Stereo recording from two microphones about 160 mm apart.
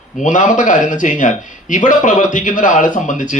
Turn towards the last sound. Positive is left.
turn(degrees=55)  # may be behind; listen again after turning